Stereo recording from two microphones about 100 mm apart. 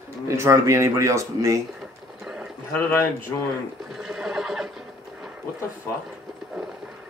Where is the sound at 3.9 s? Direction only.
5° right (ahead or behind).